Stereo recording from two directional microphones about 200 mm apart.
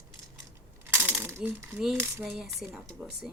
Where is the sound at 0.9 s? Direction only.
10° right (ahead or behind).